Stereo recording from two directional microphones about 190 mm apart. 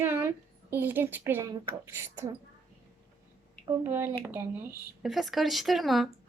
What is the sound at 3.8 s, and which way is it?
Speech, 10° right (ahead or behind).